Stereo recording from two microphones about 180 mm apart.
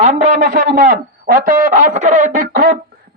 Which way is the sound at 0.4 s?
50° right (ahead or behind).